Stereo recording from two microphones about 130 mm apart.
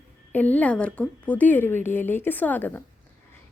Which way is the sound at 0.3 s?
10° left (ahead or behind).